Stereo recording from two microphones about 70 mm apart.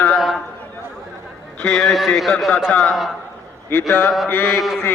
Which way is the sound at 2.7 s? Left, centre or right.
Left.